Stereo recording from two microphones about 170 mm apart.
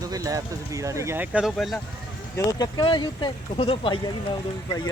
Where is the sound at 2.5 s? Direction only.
20° left (ahead or behind).